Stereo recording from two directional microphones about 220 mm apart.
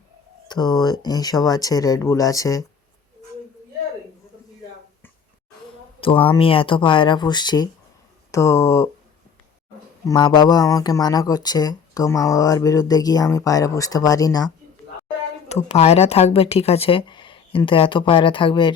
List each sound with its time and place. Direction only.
0.4 s speech: 20° left (ahead or behind)
6.0 s speech: 25° left (ahead or behind)
10.1 s speech: 20° left (ahead or behind)
15.4 s speech: 30° left (ahead or behind)